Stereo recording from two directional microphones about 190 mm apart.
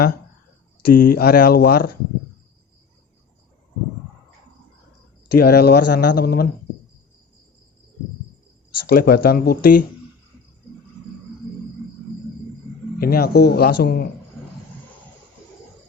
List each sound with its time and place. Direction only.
0.8 s speech: 50° left (ahead or behind)
5.3 s speech: 55° left (ahead or behind)
8.9 s speech: 50° left (ahead or behind)
13.0 s speech: 55° left (ahead or behind)